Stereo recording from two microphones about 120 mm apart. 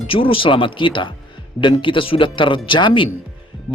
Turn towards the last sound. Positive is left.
turn(degrees=40)  # may be behind; listen again after turning